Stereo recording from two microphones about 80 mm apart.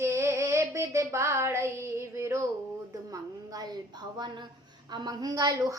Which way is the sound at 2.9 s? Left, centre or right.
Right.